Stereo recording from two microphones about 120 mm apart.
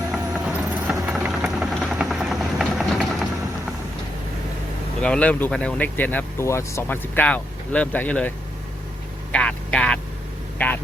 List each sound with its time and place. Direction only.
0.1 s vehicle: 10° right (ahead or behind)
1.8 s helicopter: 5° right (ahead or behind)
4.9 s speech: 10° left (ahead or behind)
9.3 s speech: 10° left (ahead or behind)